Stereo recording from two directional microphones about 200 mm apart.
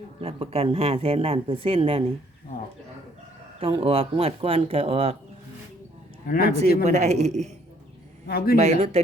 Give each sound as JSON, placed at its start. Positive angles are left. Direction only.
{"t": 0.2, "sound": "speech", "side_deg": -30}
{"t": 3.6, "sound": "speech", "side_deg": -30}
{"t": 6.2, "sound": "speech", "side_deg": 45}
{"t": 6.8, "sound": "speech", "side_deg": -35}
{"t": 8.3, "sound": "speech", "side_deg": 50}
{"t": 8.5, "sound": "speech", "side_deg": -35}